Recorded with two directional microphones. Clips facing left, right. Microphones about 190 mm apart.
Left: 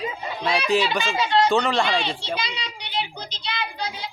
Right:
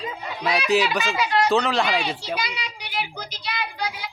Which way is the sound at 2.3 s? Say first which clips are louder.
Even; 25° left (ahead or behind).